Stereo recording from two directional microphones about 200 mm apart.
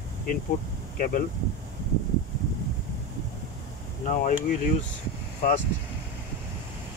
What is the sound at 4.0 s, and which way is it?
Speech, 40° left (ahead or behind).